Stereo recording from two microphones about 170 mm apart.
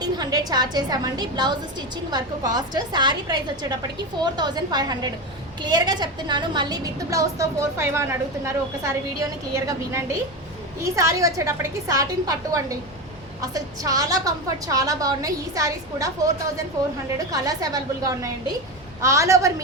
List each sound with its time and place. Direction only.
0.0 s a woman's voice: 25° right (ahead or behind)